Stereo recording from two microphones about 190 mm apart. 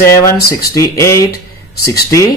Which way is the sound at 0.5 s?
15° left (ahead or behind).